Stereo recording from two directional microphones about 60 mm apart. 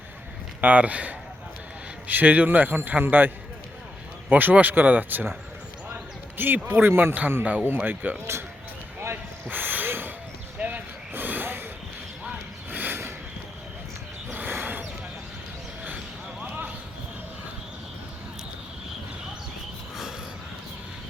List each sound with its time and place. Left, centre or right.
0.6 s a man's voice: right
5.9 s basketball bounce: right
6.7 s a man's voice: right
9.5 s a sound: right
10.6 s vehicle: right
14.3 s a sound: right
16.4 s basketball bounce: right